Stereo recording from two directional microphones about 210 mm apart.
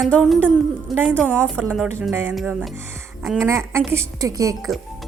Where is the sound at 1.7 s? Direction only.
10° right (ahead or behind).